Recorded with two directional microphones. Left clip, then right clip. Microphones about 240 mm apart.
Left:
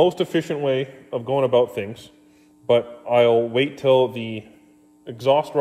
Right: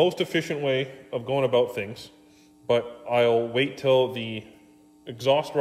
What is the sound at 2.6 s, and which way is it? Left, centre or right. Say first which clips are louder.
A man's voice: left 5 dB; left.